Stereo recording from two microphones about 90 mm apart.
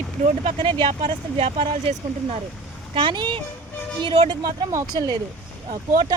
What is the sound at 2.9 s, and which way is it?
Speech, 65° right (ahead or behind).